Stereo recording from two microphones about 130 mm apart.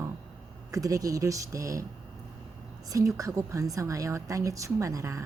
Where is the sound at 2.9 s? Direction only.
25° right (ahead or behind).